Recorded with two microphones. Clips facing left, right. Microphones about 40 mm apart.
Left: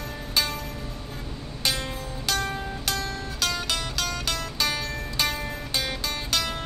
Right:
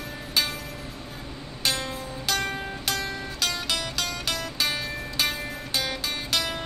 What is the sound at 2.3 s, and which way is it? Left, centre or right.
Music, right.